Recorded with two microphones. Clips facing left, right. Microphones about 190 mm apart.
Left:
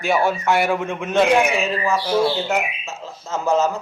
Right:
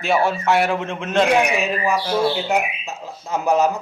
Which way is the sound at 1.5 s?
15° right (ahead or behind).